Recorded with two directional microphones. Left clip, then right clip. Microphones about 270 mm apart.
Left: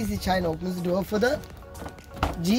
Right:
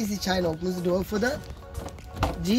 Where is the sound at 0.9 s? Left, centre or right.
Left.